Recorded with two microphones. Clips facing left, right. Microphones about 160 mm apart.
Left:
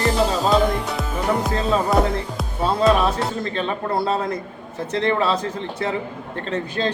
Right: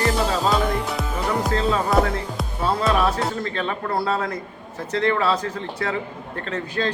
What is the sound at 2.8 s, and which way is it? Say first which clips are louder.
Speech: left 4 dB; 20° left (ahead or behind).